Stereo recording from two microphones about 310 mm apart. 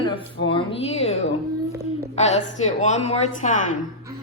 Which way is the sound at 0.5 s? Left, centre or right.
Centre.